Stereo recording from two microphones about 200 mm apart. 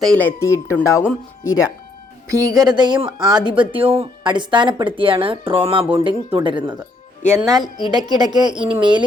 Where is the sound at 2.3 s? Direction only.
15° right (ahead or behind).